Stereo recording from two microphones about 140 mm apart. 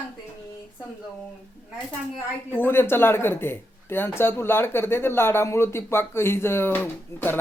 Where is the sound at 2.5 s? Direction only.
15° left (ahead or behind).